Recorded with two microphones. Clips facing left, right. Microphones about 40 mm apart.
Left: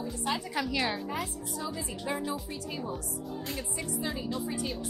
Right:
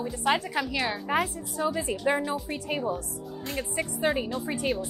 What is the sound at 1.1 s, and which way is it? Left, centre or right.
A woman's voice, right.